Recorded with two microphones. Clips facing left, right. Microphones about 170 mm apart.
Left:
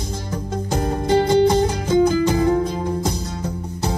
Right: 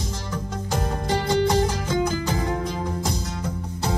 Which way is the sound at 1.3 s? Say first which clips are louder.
Left 2 dB; 25° left (ahead or behind).